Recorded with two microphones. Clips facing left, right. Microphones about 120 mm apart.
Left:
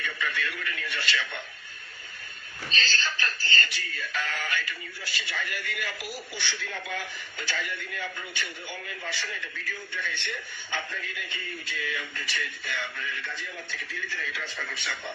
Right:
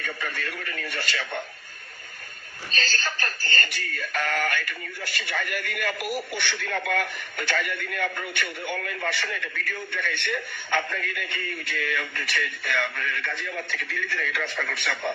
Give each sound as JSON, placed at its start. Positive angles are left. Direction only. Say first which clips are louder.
{"t": 0.0, "sound": "speech", "louder": "even", "side_deg": -45}
{"t": 2.7, "sound": "synthetic singing", "louder": "right 1 dB", "side_deg": -45}